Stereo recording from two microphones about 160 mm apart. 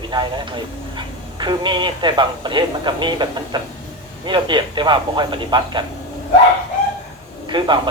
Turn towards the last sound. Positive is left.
turn(degrees=-30)  # may be behind; listen again after turning